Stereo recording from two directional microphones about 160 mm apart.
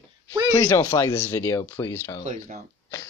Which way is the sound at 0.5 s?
20° left (ahead or behind).